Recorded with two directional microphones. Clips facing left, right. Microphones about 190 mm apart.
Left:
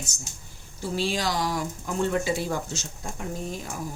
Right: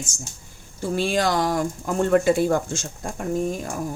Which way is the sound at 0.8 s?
55° right (ahead or behind).